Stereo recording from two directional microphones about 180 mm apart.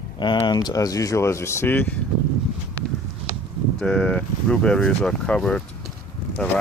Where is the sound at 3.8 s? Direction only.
5° left (ahead or behind).